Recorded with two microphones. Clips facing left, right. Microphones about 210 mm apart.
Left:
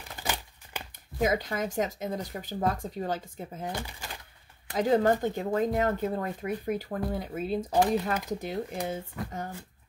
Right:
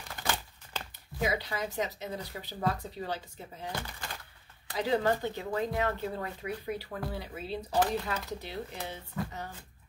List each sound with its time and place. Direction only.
0.1 s a sound: 15° left (ahead or behind)
1.2 s speech: 45° left (ahead or behind)
4.7 s speech: 45° left (ahead or behind)